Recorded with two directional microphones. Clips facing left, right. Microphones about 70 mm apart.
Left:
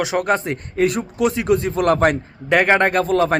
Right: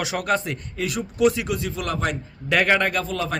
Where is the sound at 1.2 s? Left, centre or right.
Left.